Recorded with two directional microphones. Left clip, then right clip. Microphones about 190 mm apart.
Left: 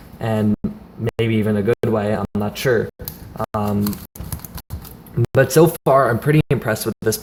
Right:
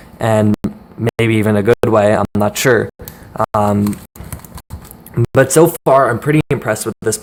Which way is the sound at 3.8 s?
5° right (ahead or behind).